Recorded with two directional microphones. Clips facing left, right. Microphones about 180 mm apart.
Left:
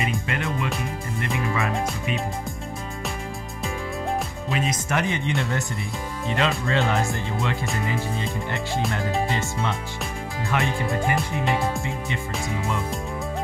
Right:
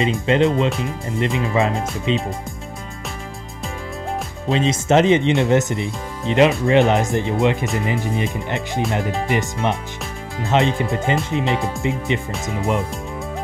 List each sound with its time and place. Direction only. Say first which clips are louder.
0.0 s speech: right 10 dB; 25° right (ahead or behind)
4.5 s speech: right 11 dB; 25° right (ahead or behind)